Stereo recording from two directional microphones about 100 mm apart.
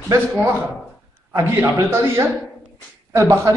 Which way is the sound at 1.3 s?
25° right (ahead or behind).